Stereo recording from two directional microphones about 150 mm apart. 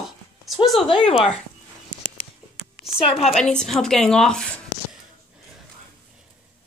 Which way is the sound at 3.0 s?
40° left (ahead or behind).